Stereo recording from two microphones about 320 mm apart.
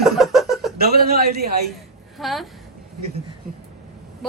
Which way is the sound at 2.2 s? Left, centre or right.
Centre.